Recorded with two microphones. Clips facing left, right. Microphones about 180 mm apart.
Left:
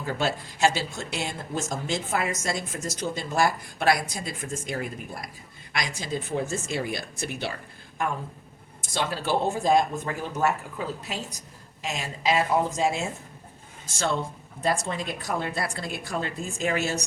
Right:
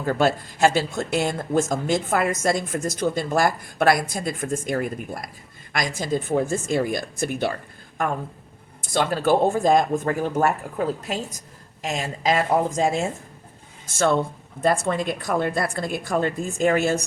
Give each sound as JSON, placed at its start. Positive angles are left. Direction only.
{"t": 0.0, "sound": "speech", "side_deg": -50}
{"t": 8.9, "sound": "speech", "side_deg": -50}